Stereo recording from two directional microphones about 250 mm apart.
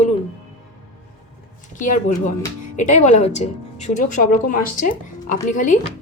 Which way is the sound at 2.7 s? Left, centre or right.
Left.